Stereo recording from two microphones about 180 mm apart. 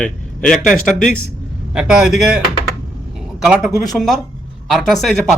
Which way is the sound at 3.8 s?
Centre (ahead or behind).